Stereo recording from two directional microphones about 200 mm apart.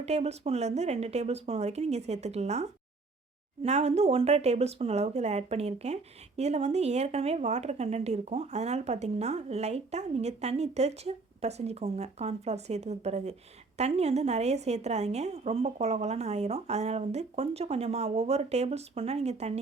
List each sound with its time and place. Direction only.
0.0 s speech: 30° right (ahead or behind)